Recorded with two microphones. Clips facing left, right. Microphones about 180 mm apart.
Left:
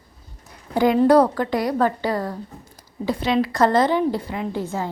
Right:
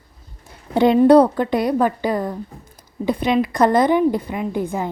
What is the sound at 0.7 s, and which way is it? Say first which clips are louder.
A woman's voice: right 4 dB; 25° right (ahead or behind).